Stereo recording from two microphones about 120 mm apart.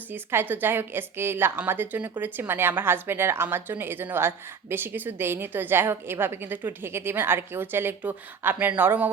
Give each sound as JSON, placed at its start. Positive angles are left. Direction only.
{"t": 0.1, "sound": "a woman's voice", "side_deg": -20}